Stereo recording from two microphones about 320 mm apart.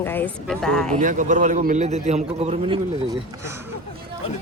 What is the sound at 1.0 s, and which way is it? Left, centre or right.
A man's voice, right.